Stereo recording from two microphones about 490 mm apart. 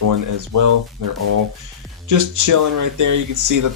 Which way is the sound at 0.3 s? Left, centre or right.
Right.